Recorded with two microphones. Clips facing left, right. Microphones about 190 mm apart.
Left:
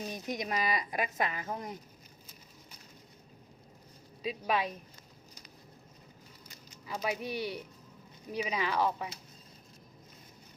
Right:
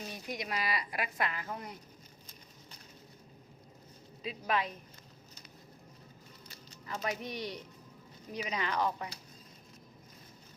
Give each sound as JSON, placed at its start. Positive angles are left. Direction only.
{"t": 0.3, "sound": "speech", "side_deg": 20}
{"t": 4.2, "sound": "speech", "side_deg": 10}
{"t": 6.7, "sound": "speech", "side_deg": 10}